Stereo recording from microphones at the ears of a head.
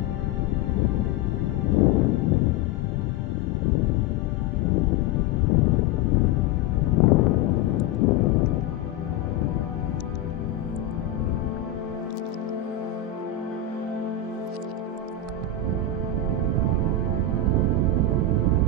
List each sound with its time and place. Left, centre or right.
1.7 s music: left
4.6 s music: left
17.5 s music: right